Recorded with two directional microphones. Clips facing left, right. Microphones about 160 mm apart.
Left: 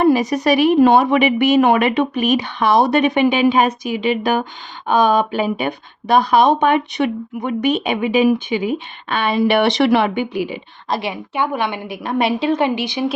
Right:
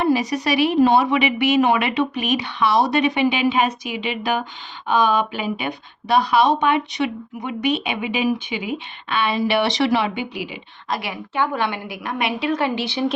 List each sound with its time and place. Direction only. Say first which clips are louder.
0.0 s speech: left 5 dB; 50° left (ahead or behind)
10.8 s a woman's voice: left 4 dB; 25° left (ahead or behind)